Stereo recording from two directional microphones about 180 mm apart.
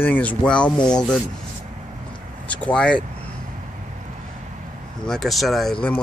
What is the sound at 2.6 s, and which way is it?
Speech, 5° left (ahead or behind).